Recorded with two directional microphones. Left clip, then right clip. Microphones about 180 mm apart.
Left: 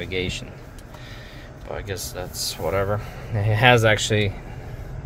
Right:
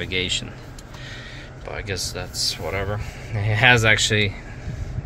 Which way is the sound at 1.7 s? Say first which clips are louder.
Right 2 dB; 20° left (ahead or behind).